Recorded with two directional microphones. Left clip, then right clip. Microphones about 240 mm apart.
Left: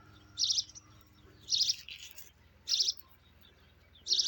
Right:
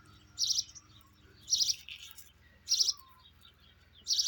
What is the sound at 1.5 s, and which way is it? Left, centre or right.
Bird, right.